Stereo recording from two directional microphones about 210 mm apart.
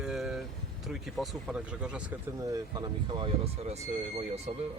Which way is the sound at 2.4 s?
20° right (ahead or behind).